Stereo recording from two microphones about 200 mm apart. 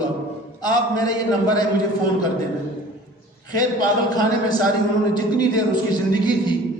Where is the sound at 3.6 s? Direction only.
20° left (ahead or behind).